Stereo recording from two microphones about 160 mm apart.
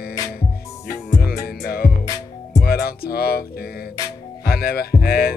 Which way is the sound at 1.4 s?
70° left (ahead or behind).